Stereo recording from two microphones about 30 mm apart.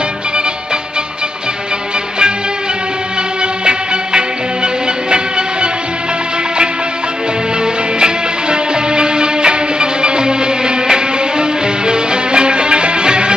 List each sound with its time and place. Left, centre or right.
3.6 s music: right
8.0 s music: right